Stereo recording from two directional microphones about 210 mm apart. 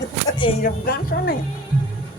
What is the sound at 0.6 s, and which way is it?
Speech, 45° left (ahead or behind).